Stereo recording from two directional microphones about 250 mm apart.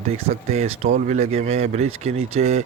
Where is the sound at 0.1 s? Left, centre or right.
Right.